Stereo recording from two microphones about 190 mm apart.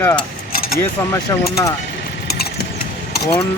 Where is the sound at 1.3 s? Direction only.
15° left (ahead or behind).